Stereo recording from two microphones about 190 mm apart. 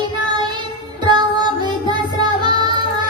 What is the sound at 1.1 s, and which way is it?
Music, 25° right (ahead or behind).